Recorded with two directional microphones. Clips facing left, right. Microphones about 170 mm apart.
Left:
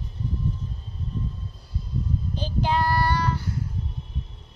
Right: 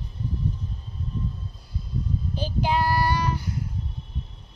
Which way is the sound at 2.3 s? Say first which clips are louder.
Even; 10° right (ahead or behind).